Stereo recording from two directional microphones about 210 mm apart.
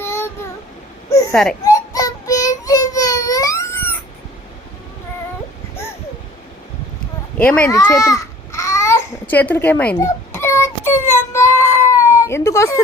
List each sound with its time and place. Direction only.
0.0 s child singing: 10° left (ahead or behind)
1.3 s speech: 5° left (ahead or behind)
1.6 s child singing: 15° left (ahead or behind)
7.3 s speech: 5° left (ahead or behind)
7.9 s babbling: 15° left (ahead or behind)